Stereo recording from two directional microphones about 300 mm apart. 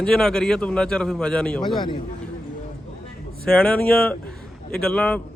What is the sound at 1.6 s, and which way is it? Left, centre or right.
Speech, centre.